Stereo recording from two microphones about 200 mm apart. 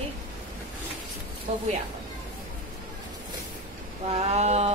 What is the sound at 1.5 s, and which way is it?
Speech, 35° right (ahead or behind).